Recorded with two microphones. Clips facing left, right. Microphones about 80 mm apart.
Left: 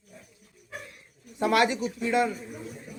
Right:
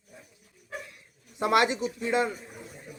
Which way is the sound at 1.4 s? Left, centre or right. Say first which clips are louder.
Even; right.